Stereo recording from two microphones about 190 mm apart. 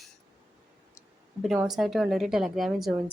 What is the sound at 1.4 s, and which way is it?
A woman's voice, centre (ahead or behind).